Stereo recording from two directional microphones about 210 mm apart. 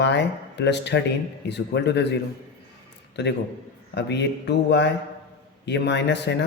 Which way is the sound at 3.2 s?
50° left (ahead or behind).